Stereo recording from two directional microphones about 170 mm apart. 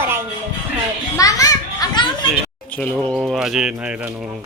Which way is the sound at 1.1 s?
20° left (ahead or behind).